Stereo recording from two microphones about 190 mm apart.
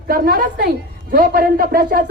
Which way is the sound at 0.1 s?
50° right (ahead or behind).